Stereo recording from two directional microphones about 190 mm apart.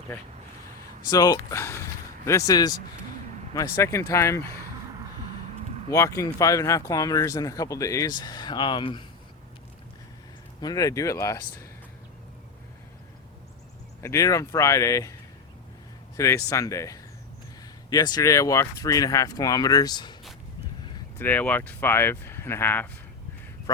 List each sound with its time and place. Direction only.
1.1 s speech: 20° left (ahead or behind)
5.9 s speech: 15° left (ahead or behind)
10.6 s speech: 20° left (ahead or behind)
14.0 s speech: 15° left (ahead or behind)
16.1 s speech: 15° left (ahead or behind)
21.2 s speech: 10° left (ahead or behind)